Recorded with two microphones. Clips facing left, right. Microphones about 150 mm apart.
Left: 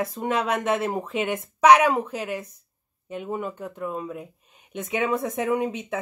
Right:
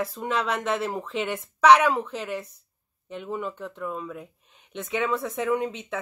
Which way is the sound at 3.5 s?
15° left (ahead or behind).